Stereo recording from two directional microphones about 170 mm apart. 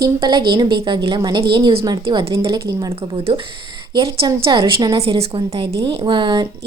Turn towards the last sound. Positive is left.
turn(degrees=-25)  # may be behind; listen again after turning